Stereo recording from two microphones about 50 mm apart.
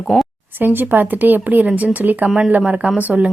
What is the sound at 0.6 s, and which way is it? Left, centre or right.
Speech, right.